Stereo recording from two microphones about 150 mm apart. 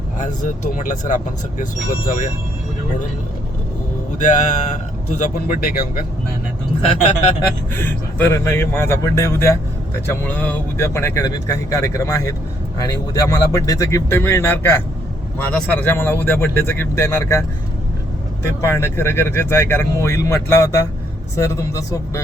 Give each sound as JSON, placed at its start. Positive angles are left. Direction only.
{"t": 0.4, "sound": "speech", "side_deg": 60}
{"t": 4.2, "sound": "speech", "side_deg": 55}
{"t": 7.7, "sound": "speech", "side_deg": 15}
{"t": 18.4, "sound": "speech", "side_deg": 15}